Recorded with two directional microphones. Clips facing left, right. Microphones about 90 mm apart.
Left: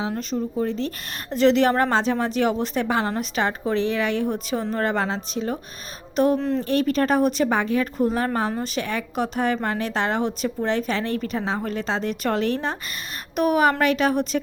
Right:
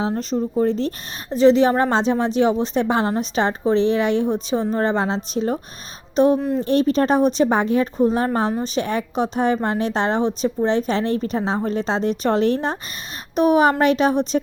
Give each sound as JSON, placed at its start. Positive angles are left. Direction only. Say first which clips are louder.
{"t": 0.0, "sound": "speech", "louder": "right 4 dB", "side_deg": -35}
{"t": 1.3, "sound": "a woman's voice", "louder": "right 4 dB", "side_deg": -15}
{"t": 5.3, "sound": "speech", "louder": "right 5 dB", "side_deg": -35}
{"t": 6.3, "sound": "speech", "louder": "right 2 dB", "side_deg": -15}
{"t": 6.7, "sound": "a woman's voice", "louder": "right 4 dB", "side_deg": -30}